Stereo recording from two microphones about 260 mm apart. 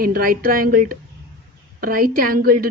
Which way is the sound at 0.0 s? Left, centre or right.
Right.